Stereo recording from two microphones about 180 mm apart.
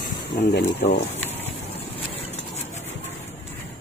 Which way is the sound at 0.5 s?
70° left (ahead or behind).